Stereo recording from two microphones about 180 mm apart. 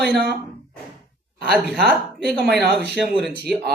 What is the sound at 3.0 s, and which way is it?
Speech, centre (ahead or behind).